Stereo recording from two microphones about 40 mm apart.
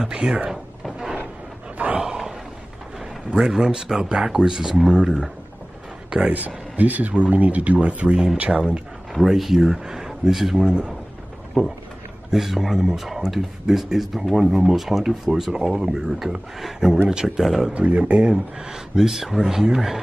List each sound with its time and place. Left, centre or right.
0.0 s speech: centre
2.0 s a sound: centre
3.3 s speech: centre
6.2 s speech: right
9.3 s speech: centre
10.6 s speech: centre
12.3 s speech: centre
17.7 s speech: right
18.3 s speech: centre